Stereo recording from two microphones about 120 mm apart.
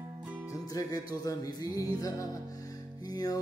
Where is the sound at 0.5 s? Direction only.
30° left (ahead or behind).